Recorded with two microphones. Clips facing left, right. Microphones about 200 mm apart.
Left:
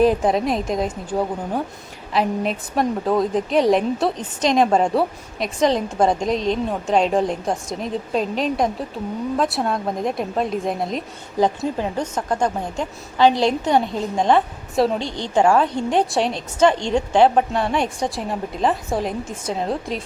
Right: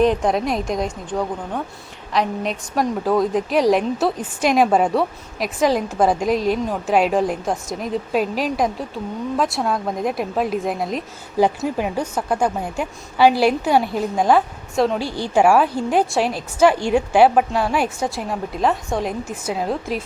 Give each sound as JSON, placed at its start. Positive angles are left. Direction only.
{"t": 0.0, "sound": "a woman's voice", "side_deg": 5}